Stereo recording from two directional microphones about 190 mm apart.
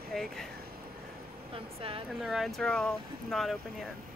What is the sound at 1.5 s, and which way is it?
Speech, 30° right (ahead or behind).